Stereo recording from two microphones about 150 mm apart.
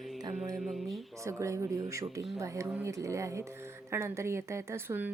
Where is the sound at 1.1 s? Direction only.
20° right (ahead or behind).